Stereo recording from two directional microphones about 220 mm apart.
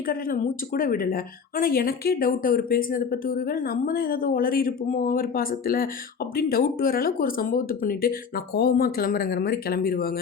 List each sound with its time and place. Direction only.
0.0 s speech: 40° left (ahead or behind)